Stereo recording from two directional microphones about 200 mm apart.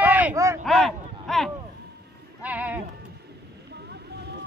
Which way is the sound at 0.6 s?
Centre (ahead or behind).